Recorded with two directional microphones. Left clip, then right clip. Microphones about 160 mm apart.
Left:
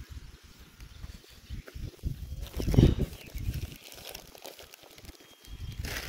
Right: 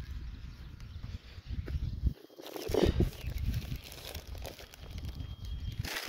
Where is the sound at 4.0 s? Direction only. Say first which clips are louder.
Left 3 dB; 15° right (ahead or behind).